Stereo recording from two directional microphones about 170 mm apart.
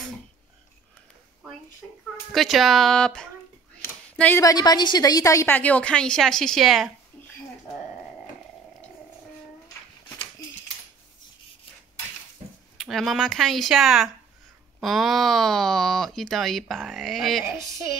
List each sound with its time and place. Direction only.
2.3 s a woman's voice: centre (ahead or behind)
12.7 s speech: centre (ahead or behind)
17.6 s speech: 15° right (ahead or behind)